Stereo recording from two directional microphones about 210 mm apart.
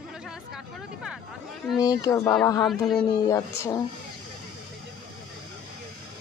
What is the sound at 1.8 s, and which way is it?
Speech, 15° left (ahead or behind).